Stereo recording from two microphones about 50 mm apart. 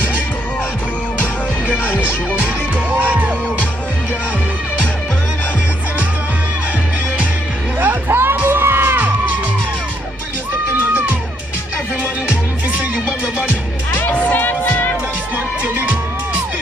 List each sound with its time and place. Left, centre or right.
3.1 s music: right
7.8 s music: right
13.9 s music: left
15.3 s music: right